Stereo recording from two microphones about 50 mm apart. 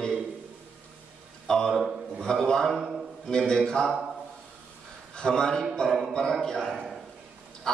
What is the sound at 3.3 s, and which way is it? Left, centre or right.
Speech, centre.